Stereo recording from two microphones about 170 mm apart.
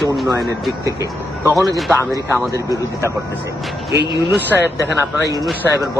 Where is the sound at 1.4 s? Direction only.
15° right (ahead or behind).